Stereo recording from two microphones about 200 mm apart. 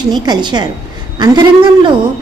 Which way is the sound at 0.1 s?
20° right (ahead or behind).